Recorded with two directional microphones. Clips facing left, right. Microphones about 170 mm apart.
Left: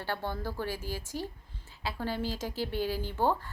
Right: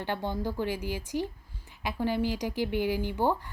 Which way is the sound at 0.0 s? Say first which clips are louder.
Right 3 dB; 15° right (ahead or behind).